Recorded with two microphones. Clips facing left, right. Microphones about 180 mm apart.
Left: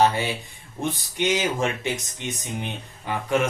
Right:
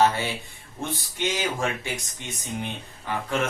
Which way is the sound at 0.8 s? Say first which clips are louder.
Left 4 dB; 20° left (ahead or behind).